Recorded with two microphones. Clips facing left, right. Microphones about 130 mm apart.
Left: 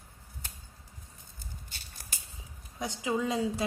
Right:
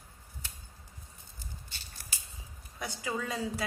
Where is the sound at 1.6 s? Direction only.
45° left (ahead or behind).